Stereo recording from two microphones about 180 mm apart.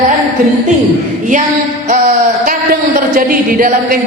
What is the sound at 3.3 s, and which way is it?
Speech, 50° right (ahead or behind).